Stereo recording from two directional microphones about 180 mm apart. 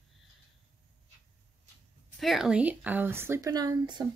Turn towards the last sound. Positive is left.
turn(degrees=-20)  # may be behind; listen again after turning